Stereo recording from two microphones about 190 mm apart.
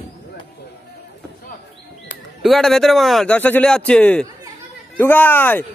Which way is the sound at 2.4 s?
Centre (ahead or behind).